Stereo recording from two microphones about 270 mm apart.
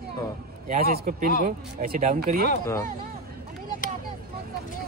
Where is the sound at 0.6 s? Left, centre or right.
Right.